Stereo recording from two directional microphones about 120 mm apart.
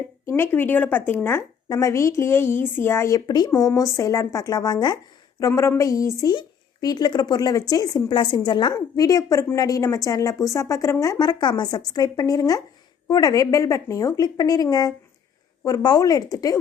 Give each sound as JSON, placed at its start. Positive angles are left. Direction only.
{"t": 0.3, "sound": "a woman's voice", "side_deg": 20}
{"t": 3.2, "sound": "a woman's voice", "side_deg": 35}
{"t": 5.4, "sound": "a woman's voice", "side_deg": 25}